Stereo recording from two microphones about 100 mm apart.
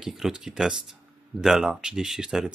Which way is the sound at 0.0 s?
5° right (ahead or behind).